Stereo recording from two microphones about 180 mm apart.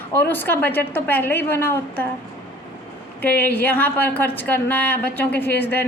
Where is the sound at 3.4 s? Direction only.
10° left (ahead or behind).